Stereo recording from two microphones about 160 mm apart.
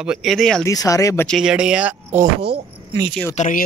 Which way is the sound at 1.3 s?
5° right (ahead or behind).